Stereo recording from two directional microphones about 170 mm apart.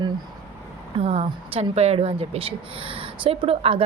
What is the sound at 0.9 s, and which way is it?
Speech, 40° right (ahead or behind).